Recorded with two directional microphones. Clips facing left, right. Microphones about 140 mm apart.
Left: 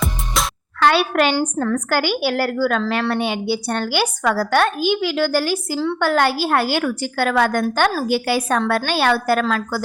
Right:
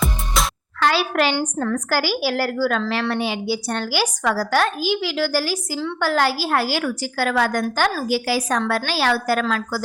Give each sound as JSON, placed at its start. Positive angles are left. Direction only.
{"t": 0.4, "sound": "music", "side_deg": 0}
{"t": 0.8, "sound": "a woman's voice", "side_deg": 60}
{"t": 1.5, "sound": "a woman's voice", "side_deg": 40}
{"t": 1.9, "sound": "a woman's voice", "side_deg": 60}